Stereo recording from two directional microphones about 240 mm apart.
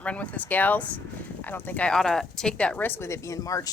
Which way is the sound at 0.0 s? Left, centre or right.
Centre.